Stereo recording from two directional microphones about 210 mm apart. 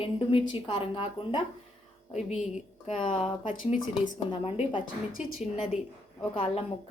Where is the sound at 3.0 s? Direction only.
25° left (ahead or behind).